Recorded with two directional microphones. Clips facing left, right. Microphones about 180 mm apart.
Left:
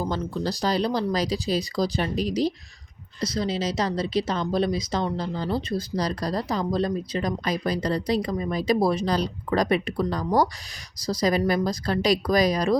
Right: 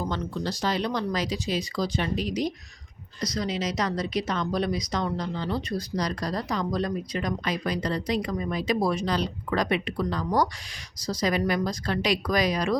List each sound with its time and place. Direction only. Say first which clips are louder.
0.1 s speech: left 3 dB; 35° left (ahead or behind)